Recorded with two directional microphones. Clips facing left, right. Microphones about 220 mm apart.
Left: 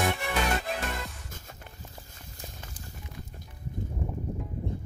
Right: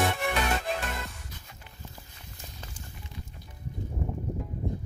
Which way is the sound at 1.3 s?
45° left (ahead or behind).